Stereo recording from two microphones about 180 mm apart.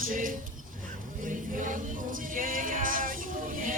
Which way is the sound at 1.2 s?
45° right (ahead or behind).